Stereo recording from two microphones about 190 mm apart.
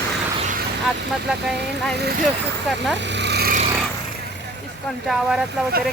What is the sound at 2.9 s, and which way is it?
Vehicle, 65° right (ahead or behind).